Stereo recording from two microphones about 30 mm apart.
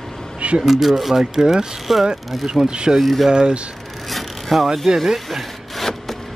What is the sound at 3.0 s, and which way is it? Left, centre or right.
Speech, centre.